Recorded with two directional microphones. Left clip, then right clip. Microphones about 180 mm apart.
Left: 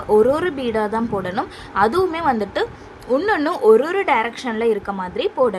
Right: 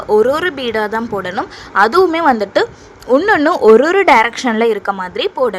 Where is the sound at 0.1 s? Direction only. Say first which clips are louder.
Right 3 dB; 35° right (ahead or behind).